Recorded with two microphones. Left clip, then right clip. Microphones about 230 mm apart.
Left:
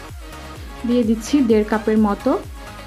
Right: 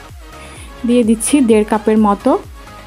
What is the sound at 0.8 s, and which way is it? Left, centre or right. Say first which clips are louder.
Speech: right 6 dB; right.